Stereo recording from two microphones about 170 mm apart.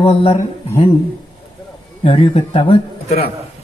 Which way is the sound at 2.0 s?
30° left (ahead or behind).